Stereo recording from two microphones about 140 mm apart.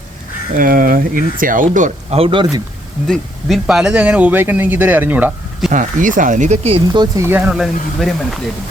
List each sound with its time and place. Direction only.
0.5 s speech: 85° right; by 2.5 s 40° right (ahead or behind)
3.1 s speech: centre (ahead or behind)
5.7 s speech: 65° right (ahead or behind); by 7.1 s 40° right (ahead or behind)
7.2 s speech: 15° right (ahead or behind)